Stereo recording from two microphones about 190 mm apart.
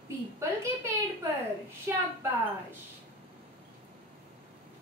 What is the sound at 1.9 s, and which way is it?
Speech, 10° right (ahead or behind).